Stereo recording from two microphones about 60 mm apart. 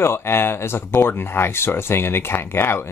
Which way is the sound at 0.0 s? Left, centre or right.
Left.